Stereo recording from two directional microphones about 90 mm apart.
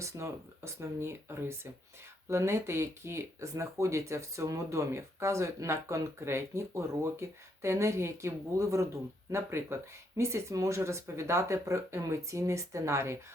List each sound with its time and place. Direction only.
0.0 s speech: 35° right (ahead or behind)